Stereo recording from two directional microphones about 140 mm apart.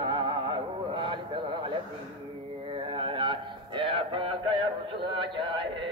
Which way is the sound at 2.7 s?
40° right (ahead or behind).